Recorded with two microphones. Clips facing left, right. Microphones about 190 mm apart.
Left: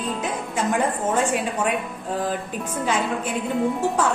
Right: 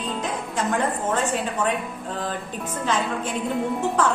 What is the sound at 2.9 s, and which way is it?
Speech, 10° left (ahead or behind).